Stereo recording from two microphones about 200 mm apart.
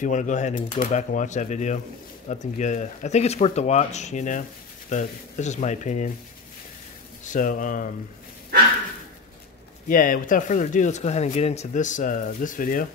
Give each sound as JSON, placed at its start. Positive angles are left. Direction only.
{"t": 0.0, "sound": "speech", "side_deg": 40}
{"t": 7.2, "sound": "speech", "side_deg": 40}
{"t": 9.8, "sound": "speech", "side_deg": 45}